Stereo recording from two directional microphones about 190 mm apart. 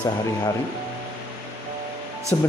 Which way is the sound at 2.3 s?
10° left (ahead or behind).